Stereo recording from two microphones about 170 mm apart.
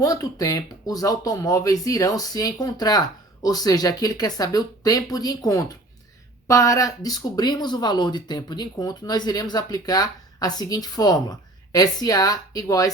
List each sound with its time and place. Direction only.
0.0 s speech: 20° left (ahead or behind)